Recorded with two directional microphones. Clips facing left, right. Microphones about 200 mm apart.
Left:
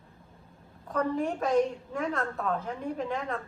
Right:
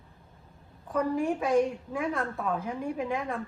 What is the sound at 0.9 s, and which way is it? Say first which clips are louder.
A woman's voice: right 1 dB; 10° right (ahead or behind).